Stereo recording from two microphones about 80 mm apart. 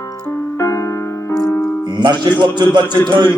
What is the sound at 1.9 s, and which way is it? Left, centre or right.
Music, right.